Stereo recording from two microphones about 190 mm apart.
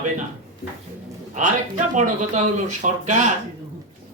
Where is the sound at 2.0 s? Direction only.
40° right (ahead or behind).